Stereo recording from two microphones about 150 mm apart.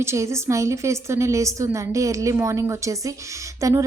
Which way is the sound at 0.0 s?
20° right (ahead or behind).